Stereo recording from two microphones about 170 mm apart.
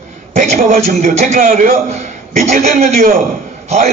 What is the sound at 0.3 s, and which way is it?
A man's voice, 45° right (ahead or behind).